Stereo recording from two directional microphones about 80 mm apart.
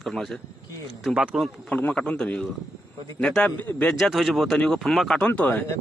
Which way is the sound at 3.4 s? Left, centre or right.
Left.